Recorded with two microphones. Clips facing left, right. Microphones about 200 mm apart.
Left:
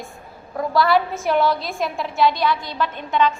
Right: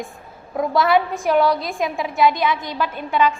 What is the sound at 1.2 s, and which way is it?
A woman's voice, centre (ahead or behind).